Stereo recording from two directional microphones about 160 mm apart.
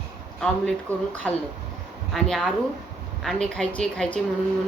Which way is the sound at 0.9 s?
15° right (ahead or behind).